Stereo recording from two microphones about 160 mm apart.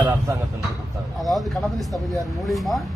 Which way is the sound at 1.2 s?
Centre (ahead or behind).